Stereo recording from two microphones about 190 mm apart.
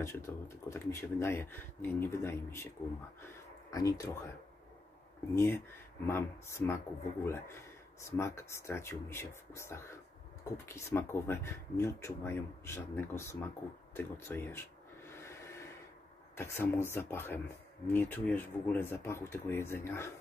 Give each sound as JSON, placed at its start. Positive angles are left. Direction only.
{"t": 0.0, "sound": "speech", "side_deg": 15}
{"t": 3.7, "sound": "speech", "side_deg": 20}
{"t": 5.3, "sound": "speech", "side_deg": 10}
{"t": 13.9, "sound": "a sound", "side_deg": 10}
{"t": 16.3, "sound": "speech", "side_deg": 10}